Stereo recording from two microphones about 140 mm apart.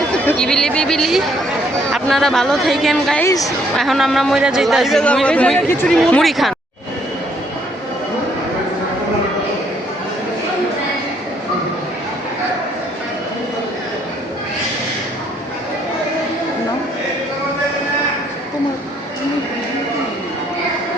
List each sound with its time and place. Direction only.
0.3 s speech: 5° left (ahead or behind)
3.2 s a woman's voice: 25° left (ahead or behind)
3.8 s speech: centre (ahead or behind)